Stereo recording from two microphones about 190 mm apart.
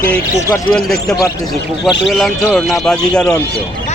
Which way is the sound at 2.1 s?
Centre (ahead or behind).